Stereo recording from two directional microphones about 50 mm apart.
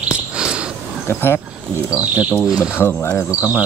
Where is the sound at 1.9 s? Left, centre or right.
Right.